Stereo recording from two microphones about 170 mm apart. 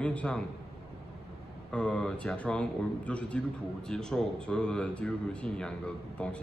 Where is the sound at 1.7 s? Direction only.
5° left (ahead or behind).